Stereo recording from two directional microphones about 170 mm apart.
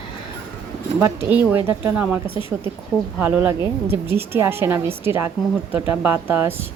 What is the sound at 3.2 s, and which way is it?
A woman's voice, 10° right (ahead or behind).